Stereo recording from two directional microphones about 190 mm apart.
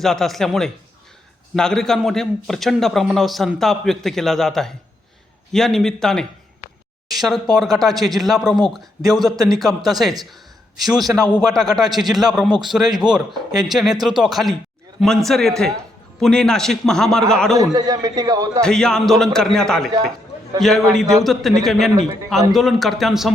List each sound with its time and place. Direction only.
0.0 s a man's voice: centre (ahead or behind)
17.6 s a man's voice: 20° right (ahead or behind)
18.6 s a man's voice: 5° left (ahead or behind)